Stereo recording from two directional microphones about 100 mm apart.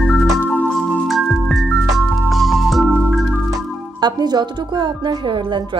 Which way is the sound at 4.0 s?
45° right (ahead or behind).